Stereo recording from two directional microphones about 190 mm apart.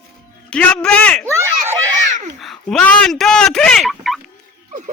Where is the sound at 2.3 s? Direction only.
Centre (ahead or behind).